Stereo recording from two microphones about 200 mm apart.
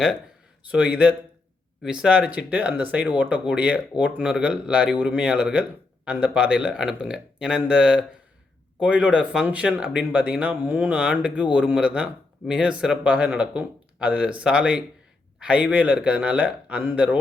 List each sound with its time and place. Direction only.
0.7 s a man's voice: 5° right (ahead or behind)